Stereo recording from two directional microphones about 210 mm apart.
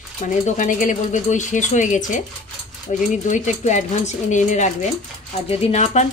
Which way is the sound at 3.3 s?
35° left (ahead or behind).